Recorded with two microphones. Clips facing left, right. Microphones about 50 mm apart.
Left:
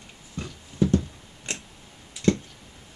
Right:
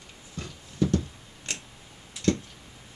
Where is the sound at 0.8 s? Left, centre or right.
Centre.